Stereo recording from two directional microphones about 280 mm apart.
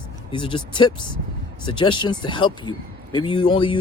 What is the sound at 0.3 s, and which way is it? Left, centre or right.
Speech, centre.